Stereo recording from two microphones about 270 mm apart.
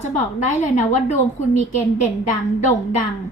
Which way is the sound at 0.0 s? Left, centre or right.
Left.